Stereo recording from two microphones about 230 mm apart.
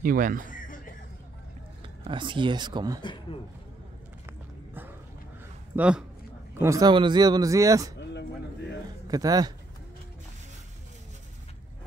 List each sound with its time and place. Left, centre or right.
0.0 s speech: right
0.5 s a sound: left
2.0 s speech: right
3.0 s a man's voice: left
5.8 s a man's voice: centre
6.6 s speech: centre
8.0 s a sound: left
9.0 s speech: centre